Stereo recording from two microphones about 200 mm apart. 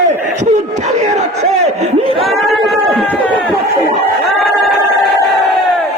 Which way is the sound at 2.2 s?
Centre (ahead or behind).